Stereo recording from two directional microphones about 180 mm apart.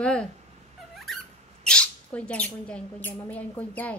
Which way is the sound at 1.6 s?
5° left (ahead or behind).